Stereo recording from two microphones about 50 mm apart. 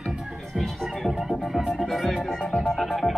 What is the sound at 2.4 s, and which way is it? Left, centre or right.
Music, centre.